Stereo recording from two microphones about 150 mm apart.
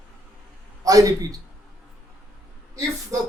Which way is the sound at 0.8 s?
25° right (ahead or behind).